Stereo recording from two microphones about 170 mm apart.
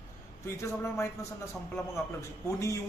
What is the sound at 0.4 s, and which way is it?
Speech, 15° left (ahead or behind).